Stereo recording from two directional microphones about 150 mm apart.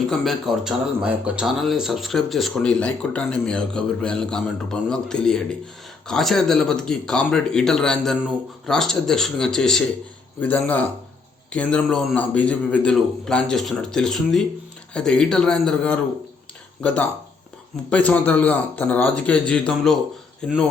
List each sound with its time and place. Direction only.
0.1 s a man's voice: centre (ahead or behind)